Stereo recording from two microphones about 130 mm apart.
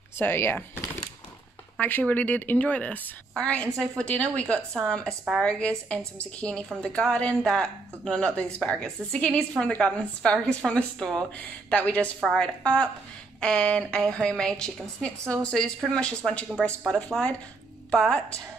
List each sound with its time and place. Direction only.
0.2 s a woman's voice: 15° left (ahead or behind)